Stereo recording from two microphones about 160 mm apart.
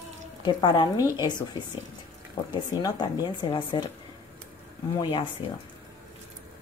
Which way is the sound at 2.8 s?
25° left (ahead or behind).